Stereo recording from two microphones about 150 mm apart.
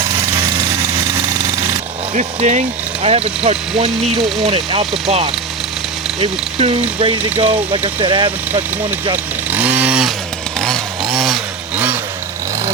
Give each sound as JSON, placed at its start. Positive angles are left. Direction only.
{"t": 2.1, "sound": "speech", "side_deg": -55}
{"t": 9.1, "sound": "chainsaw", "side_deg": -10}